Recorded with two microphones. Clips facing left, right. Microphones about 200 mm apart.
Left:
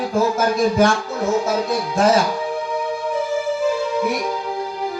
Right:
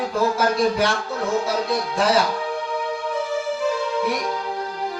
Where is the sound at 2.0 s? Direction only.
45° left (ahead or behind).